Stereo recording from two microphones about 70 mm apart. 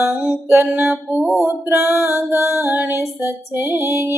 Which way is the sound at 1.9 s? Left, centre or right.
Left.